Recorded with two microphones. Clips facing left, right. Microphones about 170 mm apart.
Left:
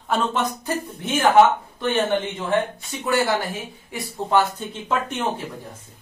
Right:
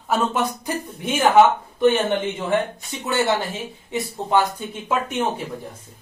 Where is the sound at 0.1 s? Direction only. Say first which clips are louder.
Right 1 dB; 10° right (ahead or behind).